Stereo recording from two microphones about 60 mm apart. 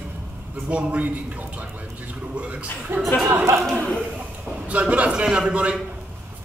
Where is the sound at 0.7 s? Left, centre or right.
Right.